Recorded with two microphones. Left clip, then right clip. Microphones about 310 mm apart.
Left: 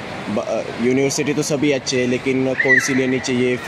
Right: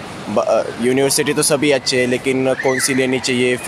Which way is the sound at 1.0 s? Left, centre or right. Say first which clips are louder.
Right 3 dB; right.